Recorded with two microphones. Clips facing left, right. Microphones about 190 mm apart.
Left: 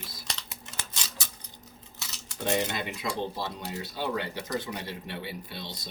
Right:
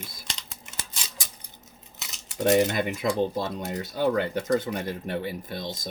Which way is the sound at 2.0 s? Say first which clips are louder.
Even; 20° right (ahead or behind).